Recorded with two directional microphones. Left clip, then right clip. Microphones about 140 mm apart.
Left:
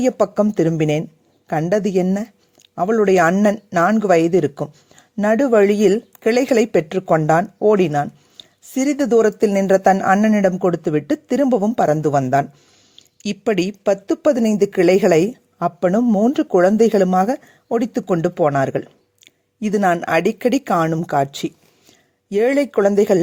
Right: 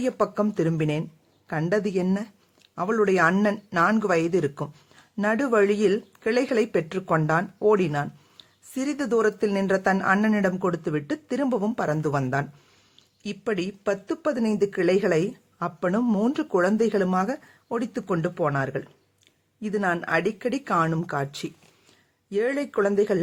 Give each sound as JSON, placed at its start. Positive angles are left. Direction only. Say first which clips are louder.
{"t": 0.0, "sound": "speech", "louder": "left 8 dB", "side_deg": 40}
{"t": 3.8, "sound": "speech", "louder": "left 9 dB", "side_deg": 35}
{"t": 11.9, "sound": "speech", "louder": "left 10 dB", "side_deg": 35}